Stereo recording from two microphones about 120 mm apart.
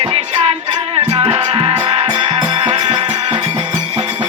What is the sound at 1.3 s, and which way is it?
Music, 45° right (ahead or behind).